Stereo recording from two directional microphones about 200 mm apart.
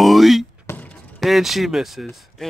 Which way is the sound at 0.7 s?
10° left (ahead or behind).